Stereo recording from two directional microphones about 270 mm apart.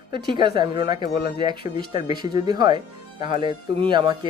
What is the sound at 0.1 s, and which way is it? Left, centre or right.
Speech, centre.